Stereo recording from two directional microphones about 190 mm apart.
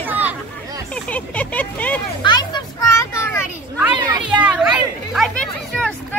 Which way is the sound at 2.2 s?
20° left (ahead or behind).